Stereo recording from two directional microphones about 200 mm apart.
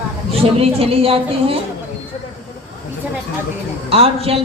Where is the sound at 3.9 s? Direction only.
30° right (ahead or behind).